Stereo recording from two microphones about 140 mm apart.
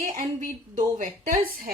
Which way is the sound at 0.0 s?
75° right (ahead or behind).